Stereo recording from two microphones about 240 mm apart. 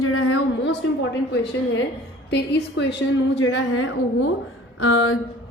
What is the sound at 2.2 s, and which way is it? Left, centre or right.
A woman's voice, left.